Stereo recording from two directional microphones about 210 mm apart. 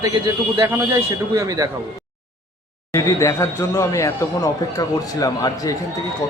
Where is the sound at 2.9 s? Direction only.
15° left (ahead or behind).